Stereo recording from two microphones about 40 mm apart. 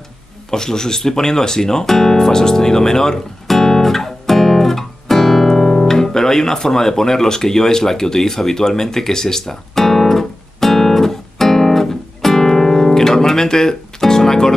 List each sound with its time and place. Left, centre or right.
0.5 s guitar: centre